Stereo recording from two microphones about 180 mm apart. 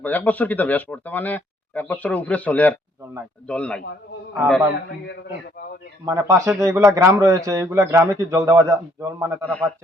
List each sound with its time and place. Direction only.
0.0 s a man's voice: 10° left (ahead or behind)
6.1 s a man's voice: 15° right (ahead or behind)
9.4 s speech: 5° left (ahead or behind)